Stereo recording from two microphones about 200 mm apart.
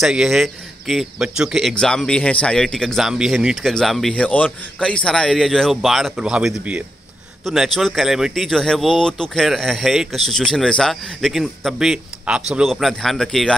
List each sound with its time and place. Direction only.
0.0 s speech: centre (ahead or behind)